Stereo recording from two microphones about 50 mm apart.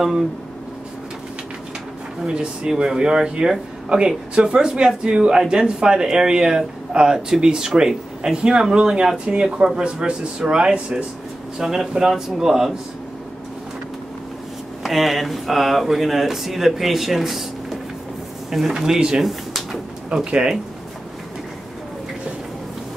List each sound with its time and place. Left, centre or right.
2.2 s speech: centre
14.8 s speech: centre
19.2 s drawer open or close: centre
20.1 s speech: centre